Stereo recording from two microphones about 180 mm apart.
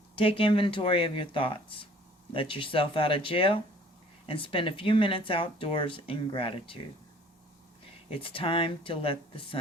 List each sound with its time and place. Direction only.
0.2 s speech: 30° left (ahead or behind)
8.2 s speech: 30° left (ahead or behind)